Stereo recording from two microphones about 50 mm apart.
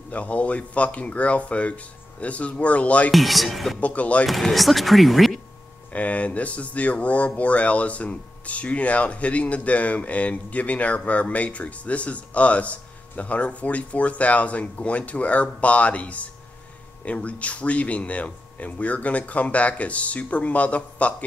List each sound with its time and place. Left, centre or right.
0.1 s speech: left
3.1 s speech: centre
3.8 s speech: left
4.3 s speech: centre
5.9 s speech: left